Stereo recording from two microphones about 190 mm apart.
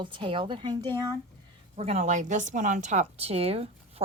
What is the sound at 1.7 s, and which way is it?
A woman's voice, 35° right (ahead or behind).